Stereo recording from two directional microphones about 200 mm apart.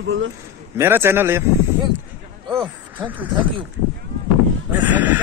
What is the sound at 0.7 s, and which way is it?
Speech, 10° right (ahead or behind).